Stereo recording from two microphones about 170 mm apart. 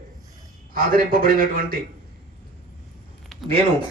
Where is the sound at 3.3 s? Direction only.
Centre (ahead or behind).